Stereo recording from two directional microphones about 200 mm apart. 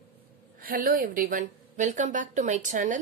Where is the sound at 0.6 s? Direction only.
45° right (ahead or behind).